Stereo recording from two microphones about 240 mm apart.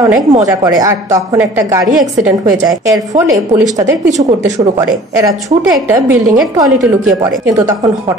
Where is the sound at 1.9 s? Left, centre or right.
Centre.